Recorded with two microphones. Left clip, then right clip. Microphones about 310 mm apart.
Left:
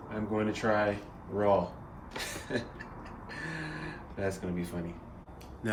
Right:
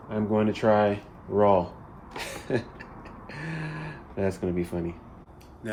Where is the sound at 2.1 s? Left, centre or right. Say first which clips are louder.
Right 5 dB; centre.